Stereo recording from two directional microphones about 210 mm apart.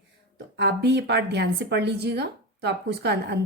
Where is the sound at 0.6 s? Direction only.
55° right (ahead or behind).